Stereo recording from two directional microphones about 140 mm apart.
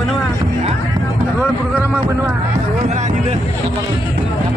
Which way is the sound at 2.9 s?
55° right (ahead or behind).